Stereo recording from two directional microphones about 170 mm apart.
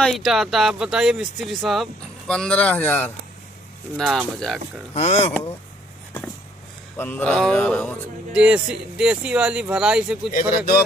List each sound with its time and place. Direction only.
0.0 s speech: centre (ahead or behind)
3.9 s speech: centre (ahead or behind)
4.9 s speech: 40° left (ahead or behind)
7.0 s mantra: 10° left (ahead or behind)
8.3 s speech: 5° right (ahead or behind)
10.3 s speech: 60° left (ahead or behind)